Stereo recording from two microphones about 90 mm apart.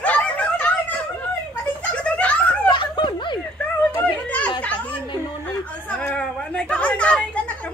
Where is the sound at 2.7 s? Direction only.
55° left (ahead or behind).